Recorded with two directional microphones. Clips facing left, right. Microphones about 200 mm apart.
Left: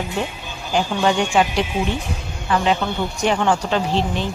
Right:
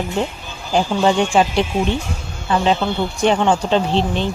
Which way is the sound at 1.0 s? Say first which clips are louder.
Right 2 dB; 30° right (ahead or behind).